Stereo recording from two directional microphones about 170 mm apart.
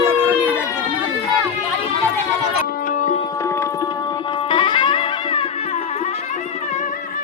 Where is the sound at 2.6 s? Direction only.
55° left (ahead or behind).